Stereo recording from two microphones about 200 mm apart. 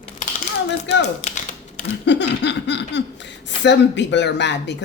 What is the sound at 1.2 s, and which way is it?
Typing, 35° left (ahead or behind).